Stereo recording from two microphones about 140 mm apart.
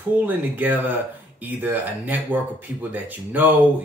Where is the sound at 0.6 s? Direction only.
10° right (ahead or behind).